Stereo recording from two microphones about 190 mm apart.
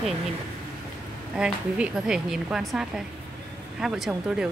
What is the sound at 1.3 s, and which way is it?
A woman's voice, 5° right (ahead or behind).